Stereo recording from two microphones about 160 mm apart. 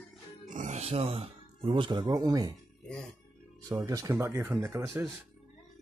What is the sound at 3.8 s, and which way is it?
Speech, 20° right (ahead or behind).